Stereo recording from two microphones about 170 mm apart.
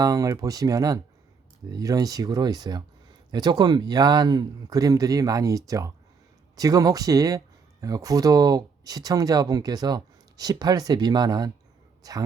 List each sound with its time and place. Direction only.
0.0 s speech: 20° right (ahead or behind)